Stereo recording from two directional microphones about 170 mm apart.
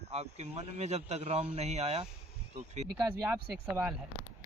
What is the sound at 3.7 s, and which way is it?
Speech, 10° right (ahead or behind).